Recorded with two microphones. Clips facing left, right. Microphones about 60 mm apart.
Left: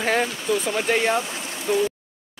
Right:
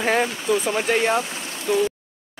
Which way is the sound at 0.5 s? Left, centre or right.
Centre.